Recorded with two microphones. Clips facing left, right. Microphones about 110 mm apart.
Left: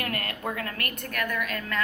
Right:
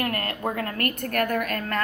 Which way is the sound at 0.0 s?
35° right (ahead or behind).